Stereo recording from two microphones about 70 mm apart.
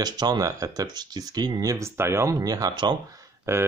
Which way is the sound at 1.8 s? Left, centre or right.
Right.